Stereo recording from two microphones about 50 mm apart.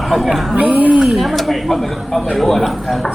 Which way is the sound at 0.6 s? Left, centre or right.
Right.